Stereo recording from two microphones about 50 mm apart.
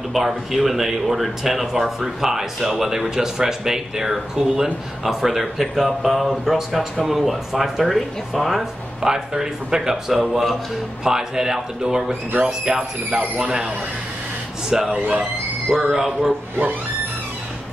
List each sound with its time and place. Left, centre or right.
0.1 s speech: centre
15.0 s speech: right
15.7 s speech: centre